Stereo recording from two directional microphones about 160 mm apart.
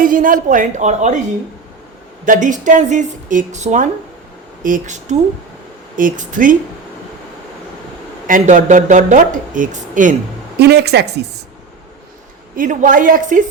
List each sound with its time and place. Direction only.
0.0 s speech: 60° right (ahead or behind)
2.2 s a woman's voice: 55° right (ahead or behind)
8.3 s speech: 50° right (ahead or behind)
10.6 s speech: 90° right
12.5 s a woman's voice: 55° right (ahead or behind)